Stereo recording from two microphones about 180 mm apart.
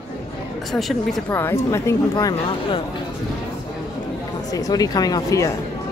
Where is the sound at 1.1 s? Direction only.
10° left (ahead or behind).